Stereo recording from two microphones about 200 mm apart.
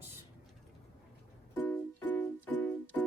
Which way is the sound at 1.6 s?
10° left (ahead or behind).